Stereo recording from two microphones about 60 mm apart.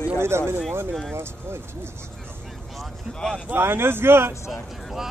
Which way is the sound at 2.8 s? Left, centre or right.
Centre.